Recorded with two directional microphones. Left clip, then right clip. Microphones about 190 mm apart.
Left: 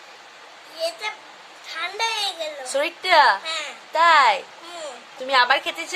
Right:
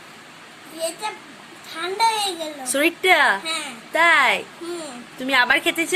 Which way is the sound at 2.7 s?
5° left (ahead or behind).